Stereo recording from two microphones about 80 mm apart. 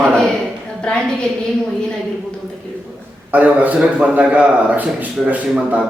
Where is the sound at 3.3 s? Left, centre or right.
Right.